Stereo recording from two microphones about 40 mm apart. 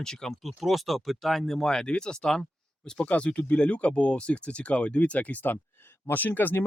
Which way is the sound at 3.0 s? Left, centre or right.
Left.